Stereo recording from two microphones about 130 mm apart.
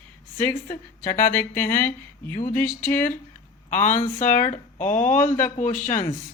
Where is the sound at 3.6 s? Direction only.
75° left (ahead or behind).